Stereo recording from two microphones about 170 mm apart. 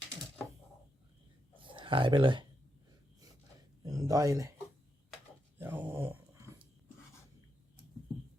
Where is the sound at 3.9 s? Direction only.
20° right (ahead or behind).